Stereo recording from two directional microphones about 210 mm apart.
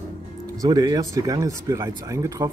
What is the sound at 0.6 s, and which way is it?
Speech, 20° right (ahead or behind).